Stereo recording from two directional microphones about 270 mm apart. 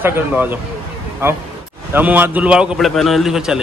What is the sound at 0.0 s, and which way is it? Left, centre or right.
Speech, centre.